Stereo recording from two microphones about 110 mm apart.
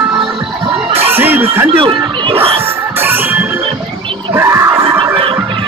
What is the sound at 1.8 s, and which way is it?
Music, 55° right (ahead or behind).